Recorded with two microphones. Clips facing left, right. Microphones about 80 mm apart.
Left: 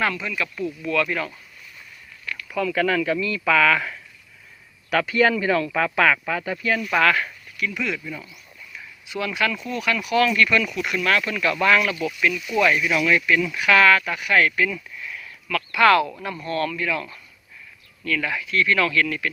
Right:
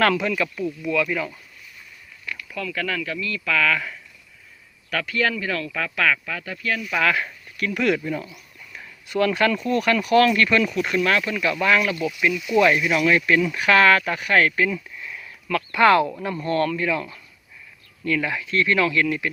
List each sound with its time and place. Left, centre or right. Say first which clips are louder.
0.0 s speech: right 5 dB; right
0.6 s speech: left 3 dB; centre
2.2 s a sound: left 1 dB; centre
2.5 s speech: left 6 dB; centre
6.7 s speech: left 4 dB; centre
7.0 s speech: left 1 dB; centre
7.5 s speech: right 5 dB; right
8.7 s a sound: right 5 dB; right
9.6 s speech: right 5 dB; right; by 12.5 s centre
12.5 s speech: right 2 dB; right
18.8 s speech: right 1 dB; centre